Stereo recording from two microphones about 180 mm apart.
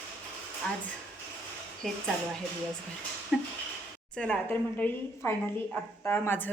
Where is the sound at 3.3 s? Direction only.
5° right (ahead or behind).